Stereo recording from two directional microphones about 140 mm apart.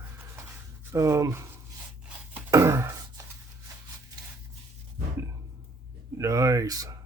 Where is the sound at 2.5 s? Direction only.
20° right (ahead or behind).